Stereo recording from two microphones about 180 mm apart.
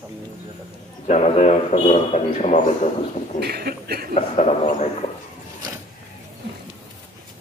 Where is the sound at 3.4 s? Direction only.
60° right (ahead or behind).